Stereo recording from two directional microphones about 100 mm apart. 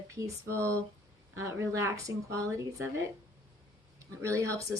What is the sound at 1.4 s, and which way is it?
Speech, 30° right (ahead or behind).